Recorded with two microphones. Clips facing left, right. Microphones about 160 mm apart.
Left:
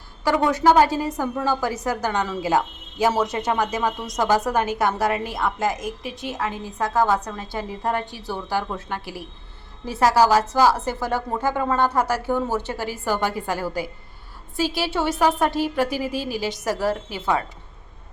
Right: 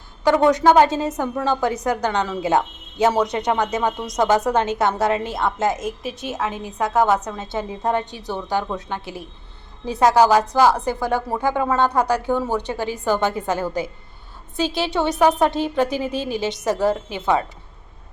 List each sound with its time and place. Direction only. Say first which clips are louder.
0.3 s a woman's voice: right 3 dB; 20° right (ahead or behind)